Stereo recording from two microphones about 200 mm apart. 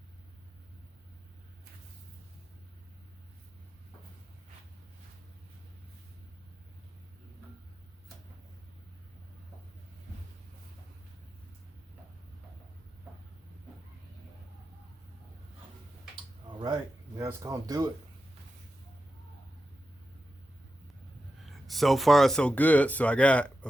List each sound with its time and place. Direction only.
16.5 s a sound: 20° right (ahead or behind)
17.2 s speech: 15° right (ahead or behind)
21.4 s speech: centre (ahead or behind)